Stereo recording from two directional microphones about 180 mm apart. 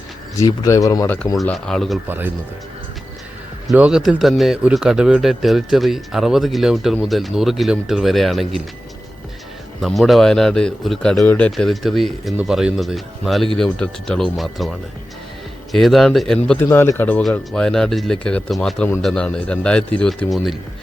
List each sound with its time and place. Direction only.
0.3 s a man's voice: 20° left (ahead or behind); by 2.0 s centre (ahead or behind)
2.0 s a man's voice: 10° right (ahead or behind)
3.7 s a man's voice: 5° right (ahead or behind)
9.8 s a man's voice: centre (ahead or behind)
15.7 s a man's voice: centre (ahead or behind)